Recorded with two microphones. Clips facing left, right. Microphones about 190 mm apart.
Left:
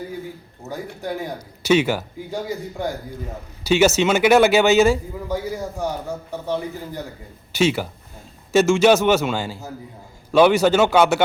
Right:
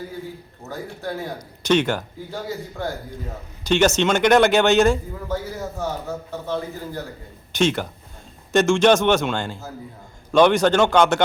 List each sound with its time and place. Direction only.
0.7 s speech: 15° left (ahead or behind)
7.5 s speech: 5° left (ahead or behind)